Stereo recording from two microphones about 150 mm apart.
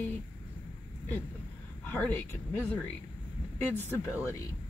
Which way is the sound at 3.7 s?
15° left (ahead or behind).